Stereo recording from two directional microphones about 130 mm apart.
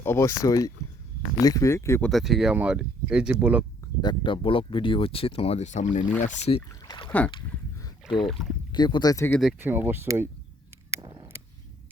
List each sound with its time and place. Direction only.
0.0 s speech: 20° left (ahead or behind)
2.0 s speech: 5° left (ahead or behind)
4.0 s speech: 35° left (ahead or behind); by 6.1 s 70° left (ahead or behind)
6.5 s speech: 40° left (ahead or behind)
6.8 s rowboat: 35° left (ahead or behind)
8.0 s speech: centre (ahead or behind)
8.7 s speech: 35° left (ahead or behind)
9.6 s speech: 15° right (ahead or behind)
11.0 s a sound: 35° right (ahead or behind)